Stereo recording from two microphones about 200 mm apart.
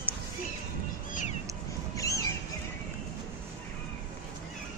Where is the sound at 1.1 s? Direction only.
40° left (ahead or behind).